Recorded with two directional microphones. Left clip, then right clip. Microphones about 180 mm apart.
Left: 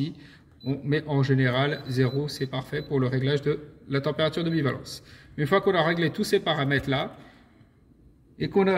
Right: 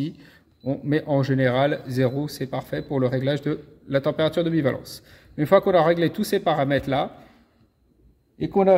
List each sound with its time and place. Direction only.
0.0 s speech: 45° right (ahead or behind)
8.4 s a man's voice: 35° right (ahead or behind)